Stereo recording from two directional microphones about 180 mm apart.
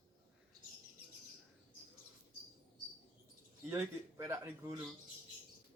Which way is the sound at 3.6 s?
15° right (ahead or behind).